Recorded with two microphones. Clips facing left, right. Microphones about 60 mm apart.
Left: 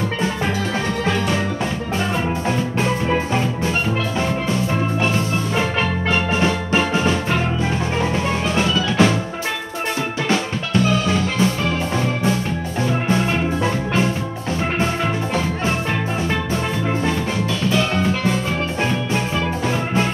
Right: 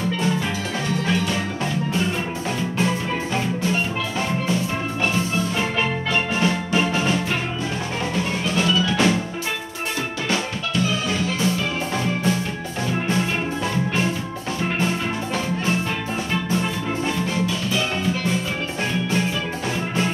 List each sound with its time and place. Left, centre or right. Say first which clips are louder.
6.0 s music: left 4 dB; left
8.5 s music: left 2 dB; left